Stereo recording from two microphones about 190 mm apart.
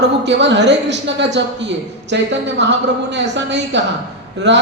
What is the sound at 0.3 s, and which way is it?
Speech, 70° right (ahead or behind).